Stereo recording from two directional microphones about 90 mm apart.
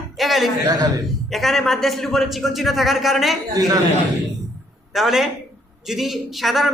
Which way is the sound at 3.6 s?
45° right (ahead or behind).